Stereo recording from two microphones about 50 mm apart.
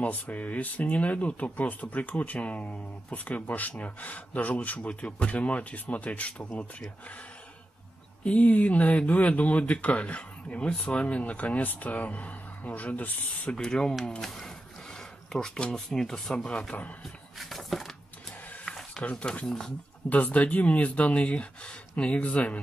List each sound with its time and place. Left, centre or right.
0.0 s speech: left
8.2 s speech: left
13.5 s speech: centre
17.4 s a sound: centre
19.4 s speech: centre
20.1 s speech: left